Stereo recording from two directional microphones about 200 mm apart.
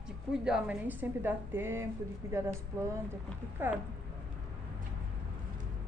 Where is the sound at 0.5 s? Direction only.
10° right (ahead or behind).